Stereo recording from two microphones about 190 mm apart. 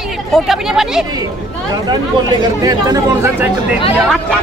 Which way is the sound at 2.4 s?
20° right (ahead or behind).